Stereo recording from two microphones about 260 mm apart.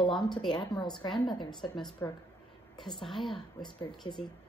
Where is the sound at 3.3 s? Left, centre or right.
Centre.